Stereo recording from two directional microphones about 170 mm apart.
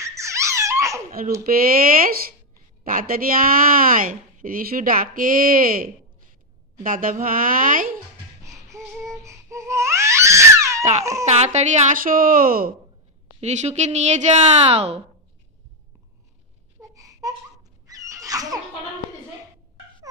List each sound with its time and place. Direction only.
0.0 s baby laughter: 15° right (ahead or behind)
1.4 s a woman's voice: 55° right (ahead or behind)
8.6 s crying: 20° right (ahead or behind)
11.2 s speech: 40° right (ahead or behind); by 12.7 s 55° right (ahead or behind)
13.4 s speech: 40° right (ahead or behind)
16.9 s a sound: 20° right (ahead or behind)